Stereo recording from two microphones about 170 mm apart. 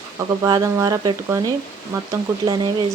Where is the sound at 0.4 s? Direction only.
20° right (ahead or behind).